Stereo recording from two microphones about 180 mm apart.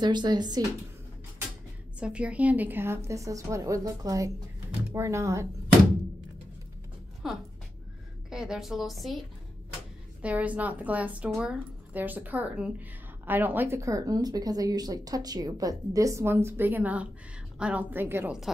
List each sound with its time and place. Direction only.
0.0 s speech: 25° right (ahead or behind)
2.0 s a woman's voice: 5° right (ahead or behind)
7.2 s a woman's voice: centre (ahead or behind)
10.2 s a woman's voice: 10° right (ahead or behind)